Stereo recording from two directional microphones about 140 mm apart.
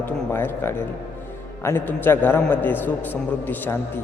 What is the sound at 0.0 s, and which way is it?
A man's voice, 15° left (ahead or behind).